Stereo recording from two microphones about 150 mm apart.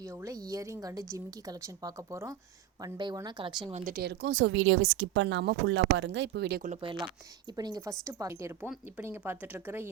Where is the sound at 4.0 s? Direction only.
90° right.